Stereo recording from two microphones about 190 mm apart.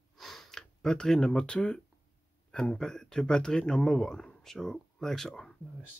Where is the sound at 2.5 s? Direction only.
5° left (ahead or behind).